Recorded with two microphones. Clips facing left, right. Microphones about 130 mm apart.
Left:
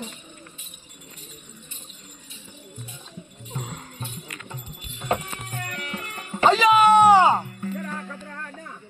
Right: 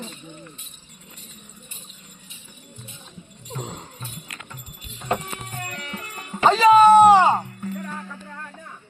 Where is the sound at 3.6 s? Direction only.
25° right (ahead or behind).